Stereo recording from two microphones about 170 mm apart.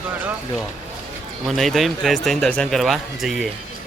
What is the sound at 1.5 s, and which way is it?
Speech, centre (ahead or behind).